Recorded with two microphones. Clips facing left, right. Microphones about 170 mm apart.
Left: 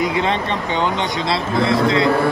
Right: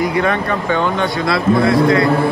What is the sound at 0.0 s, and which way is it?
A man's voice, 20° left (ahead or behind).